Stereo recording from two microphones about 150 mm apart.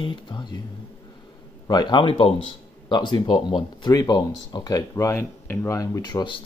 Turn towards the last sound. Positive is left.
turn(degrees=30)  # may be behind; listen again after turning